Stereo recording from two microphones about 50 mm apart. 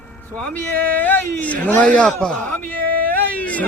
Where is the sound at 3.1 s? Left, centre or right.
Left.